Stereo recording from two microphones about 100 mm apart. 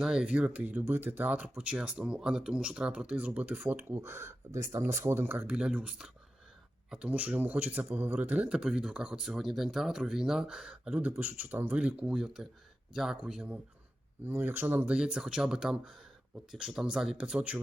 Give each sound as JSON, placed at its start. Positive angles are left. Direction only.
{"t": 0.0, "sound": "a man's voice", "side_deg": -5}
{"t": 5.5, "sound": "a man's voice", "side_deg": -10}
{"t": 14.3, "sound": "a man's voice", "side_deg": -20}